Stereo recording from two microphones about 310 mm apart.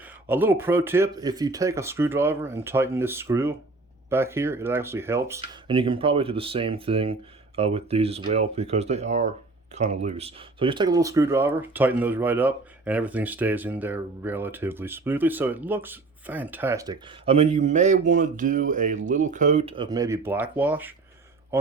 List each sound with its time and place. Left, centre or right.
0.0 s speech: centre